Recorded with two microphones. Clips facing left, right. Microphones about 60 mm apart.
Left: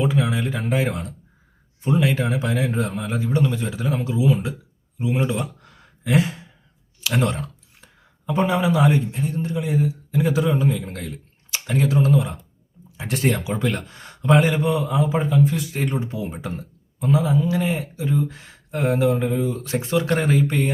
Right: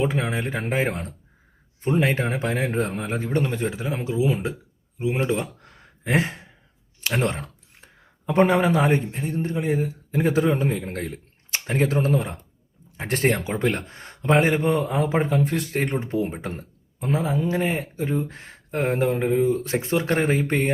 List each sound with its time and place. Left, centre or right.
0.0 s a man's voice: right
3.8 s speech: right
4.9 s a sound: right
8.3 s a man's voice: right